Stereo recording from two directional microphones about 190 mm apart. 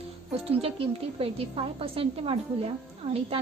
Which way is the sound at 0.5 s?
30° right (ahead or behind).